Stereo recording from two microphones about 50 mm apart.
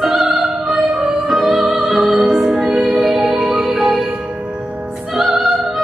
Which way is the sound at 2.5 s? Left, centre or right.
Right.